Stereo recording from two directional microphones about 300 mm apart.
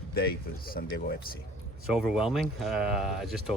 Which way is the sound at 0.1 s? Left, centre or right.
Left.